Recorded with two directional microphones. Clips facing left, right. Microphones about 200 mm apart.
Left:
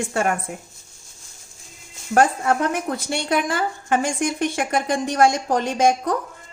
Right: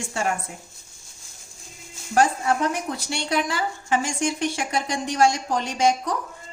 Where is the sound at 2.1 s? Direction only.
55° left (ahead or behind).